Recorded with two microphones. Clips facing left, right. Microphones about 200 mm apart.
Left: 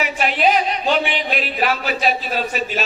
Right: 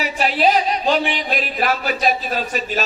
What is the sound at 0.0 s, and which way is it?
A man's voice, 35° right (ahead or behind).